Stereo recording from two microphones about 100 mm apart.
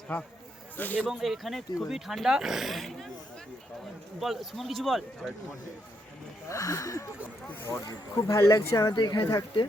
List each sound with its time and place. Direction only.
0.1 s a man's voice: 15° left (ahead or behind)
0.9 s speech: centre (ahead or behind)
4.2 s speech: centre (ahead or behind)
6.5 s speech: 35° left (ahead or behind)
9.0 s speech: 50° left (ahead or behind)